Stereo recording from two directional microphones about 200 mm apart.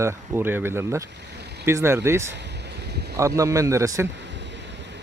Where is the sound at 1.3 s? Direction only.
55° right (ahead or behind).